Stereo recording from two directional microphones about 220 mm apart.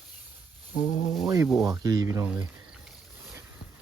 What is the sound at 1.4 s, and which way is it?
Speech, centre (ahead or behind).